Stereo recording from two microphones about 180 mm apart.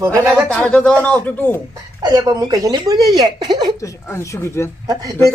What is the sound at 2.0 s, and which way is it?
Speech, 20° right (ahead or behind).